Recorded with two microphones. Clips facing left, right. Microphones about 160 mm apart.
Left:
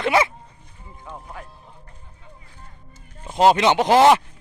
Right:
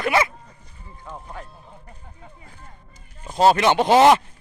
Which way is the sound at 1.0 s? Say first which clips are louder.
Right 1 dB; centre (ahead or behind).